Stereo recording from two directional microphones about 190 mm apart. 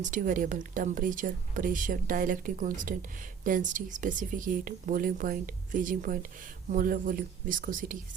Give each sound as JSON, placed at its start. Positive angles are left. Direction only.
{"t": 0.0, "sound": "speech", "side_deg": -45}